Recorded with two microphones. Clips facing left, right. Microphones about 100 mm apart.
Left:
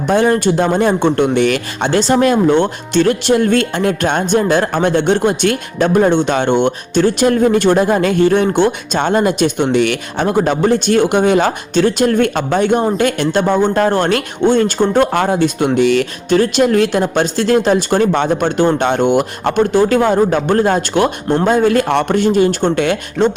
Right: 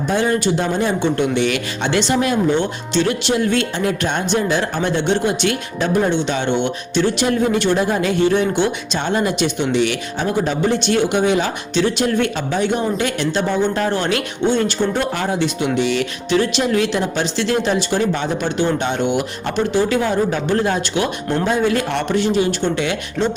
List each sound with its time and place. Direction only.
0.1 s speech: 50° left (ahead or behind)